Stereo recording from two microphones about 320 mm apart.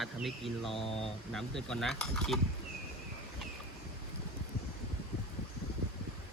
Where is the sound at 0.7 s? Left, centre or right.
Centre.